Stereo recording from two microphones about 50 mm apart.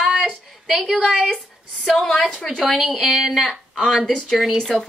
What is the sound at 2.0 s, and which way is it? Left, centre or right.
Speech, centre.